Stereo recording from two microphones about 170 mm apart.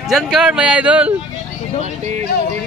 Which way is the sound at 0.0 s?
Centre (ahead or behind).